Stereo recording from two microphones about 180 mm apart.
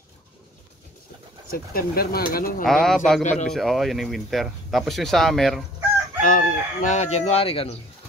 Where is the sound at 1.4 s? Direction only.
55° left (ahead or behind).